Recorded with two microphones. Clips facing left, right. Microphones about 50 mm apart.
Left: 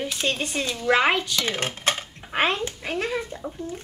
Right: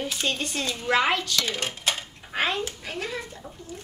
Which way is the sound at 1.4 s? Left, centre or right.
Left.